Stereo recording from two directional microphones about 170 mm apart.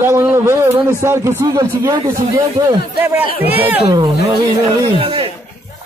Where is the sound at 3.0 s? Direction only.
10° right (ahead or behind).